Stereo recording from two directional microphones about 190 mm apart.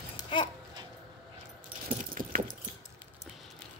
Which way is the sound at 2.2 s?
45° right (ahead or behind).